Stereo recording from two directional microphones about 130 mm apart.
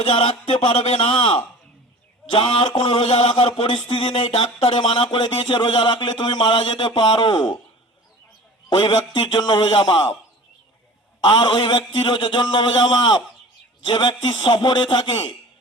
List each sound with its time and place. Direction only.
0.0 s a man's voice: 45° left (ahead or behind)
8.7 s a man's voice: 35° left (ahead or behind)
11.2 s a man's voice: 35° left (ahead or behind)